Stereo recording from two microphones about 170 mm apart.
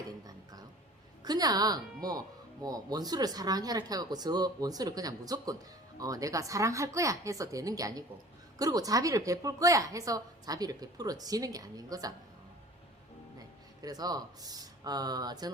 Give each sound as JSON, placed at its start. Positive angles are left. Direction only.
{"t": 1.2, "sound": "a woman's voice", "side_deg": -25}
{"t": 13.8, "sound": "a woman's voice", "side_deg": -25}